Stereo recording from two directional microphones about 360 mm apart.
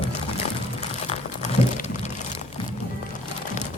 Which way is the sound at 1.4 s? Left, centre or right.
Centre.